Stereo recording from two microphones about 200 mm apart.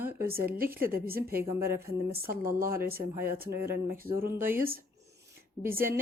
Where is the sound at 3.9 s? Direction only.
45° right (ahead or behind).